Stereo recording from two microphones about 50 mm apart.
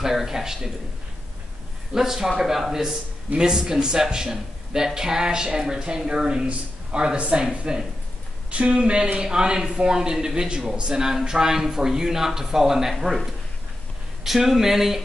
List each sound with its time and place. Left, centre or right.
0.0 s speech: centre
2.0 s speech: centre